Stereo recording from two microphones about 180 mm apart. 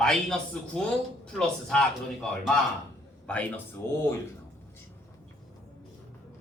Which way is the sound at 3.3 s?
5° left (ahead or behind).